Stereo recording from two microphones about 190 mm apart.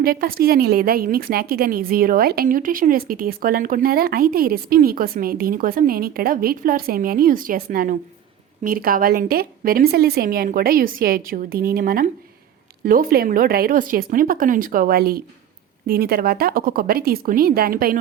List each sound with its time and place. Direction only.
0.0 s a woman's voice: 50° right (ahead or behind)